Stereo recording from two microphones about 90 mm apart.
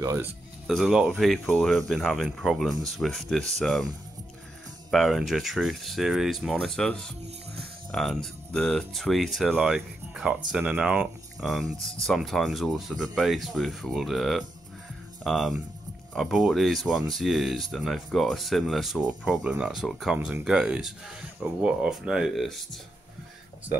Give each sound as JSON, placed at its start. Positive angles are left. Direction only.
{"t": 0.0, "sound": "speech", "side_deg": -35}
{"t": 0.7, "sound": "speech", "side_deg": 0}
{"t": 4.9, "sound": "speech", "side_deg": 0}
{"t": 10.2, "sound": "speech", "side_deg": -10}
{"t": 11.4, "sound": "speech", "side_deg": 0}